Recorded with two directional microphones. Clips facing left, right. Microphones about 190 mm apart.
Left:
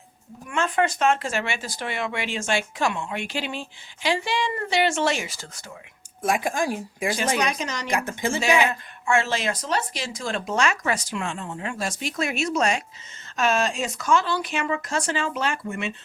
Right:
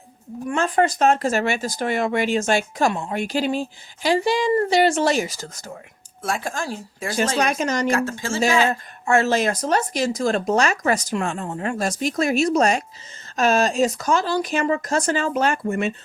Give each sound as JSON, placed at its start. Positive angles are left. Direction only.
{"t": 0.4, "sound": "speech", "side_deg": -35}
{"t": 6.2, "sound": "speech", "side_deg": 15}
{"t": 7.3, "sound": "speech", "side_deg": -50}
{"t": 7.9, "sound": "speech", "side_deg": 15}
{"t": 8.7, "sound": "speech", "side_deg": -40}